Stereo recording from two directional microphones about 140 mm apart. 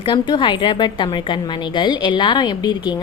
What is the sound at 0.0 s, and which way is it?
A woman's voice, 35° left (ahead or behind).